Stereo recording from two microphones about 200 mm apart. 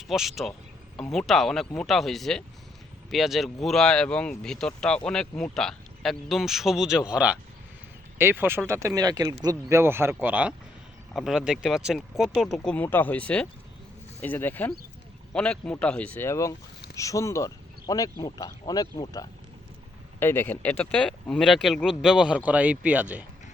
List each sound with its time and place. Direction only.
0.1 s speech: centre (ahead or behind)